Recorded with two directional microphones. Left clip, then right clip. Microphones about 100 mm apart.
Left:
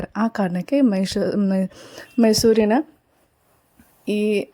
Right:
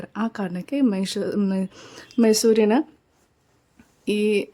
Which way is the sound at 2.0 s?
35° left (ahead or behind).